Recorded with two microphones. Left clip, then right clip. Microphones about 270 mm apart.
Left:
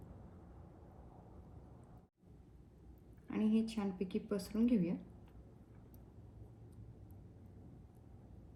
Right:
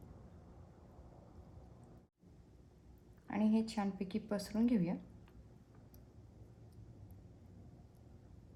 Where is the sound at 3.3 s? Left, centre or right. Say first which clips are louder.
Right 1 dB; right.